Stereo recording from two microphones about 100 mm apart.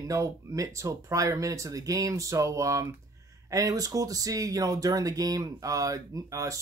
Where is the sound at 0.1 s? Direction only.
35° right (ahead or behind).